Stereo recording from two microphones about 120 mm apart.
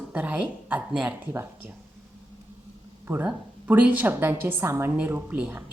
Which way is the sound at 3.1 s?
15° right (ahead or behind).